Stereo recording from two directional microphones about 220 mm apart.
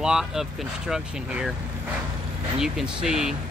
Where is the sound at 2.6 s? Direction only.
Centre (ahead or behind).